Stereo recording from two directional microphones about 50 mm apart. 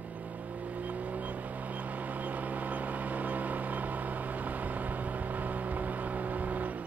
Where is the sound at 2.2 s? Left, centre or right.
Right.